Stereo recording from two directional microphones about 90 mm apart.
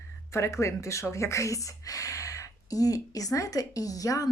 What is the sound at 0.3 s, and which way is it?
Speech, 30° left (ahead or behind).